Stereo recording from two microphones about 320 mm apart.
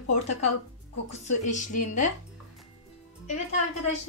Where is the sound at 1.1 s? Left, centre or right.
Left.